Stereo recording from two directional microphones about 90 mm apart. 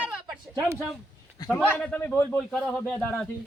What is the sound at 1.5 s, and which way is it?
Speech, 15° left (ahead or behind).